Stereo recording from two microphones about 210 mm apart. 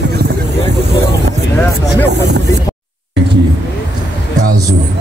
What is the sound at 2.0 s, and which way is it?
Speech, 55° right (ahead or behind).